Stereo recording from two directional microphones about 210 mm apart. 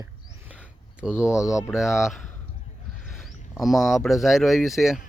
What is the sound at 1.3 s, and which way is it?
Speech, 15° left (ahead or behind).